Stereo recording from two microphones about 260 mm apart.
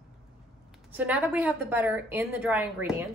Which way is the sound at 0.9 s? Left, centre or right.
Centre.